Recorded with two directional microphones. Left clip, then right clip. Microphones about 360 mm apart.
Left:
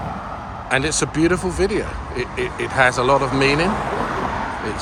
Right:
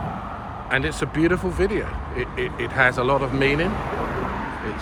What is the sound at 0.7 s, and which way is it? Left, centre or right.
Speech, centre.